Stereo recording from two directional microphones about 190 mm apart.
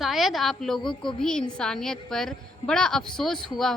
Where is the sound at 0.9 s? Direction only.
25° left (ahead or behind).